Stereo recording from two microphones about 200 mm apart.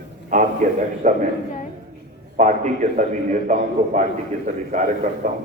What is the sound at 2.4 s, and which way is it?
A man's voice, 35° right (ahead or behind).